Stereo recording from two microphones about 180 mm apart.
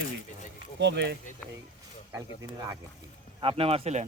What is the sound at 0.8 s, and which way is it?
Speech, 75° right (ahead or behind).